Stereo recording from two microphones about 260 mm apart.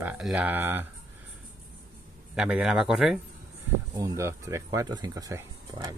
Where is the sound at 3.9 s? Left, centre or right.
Centre.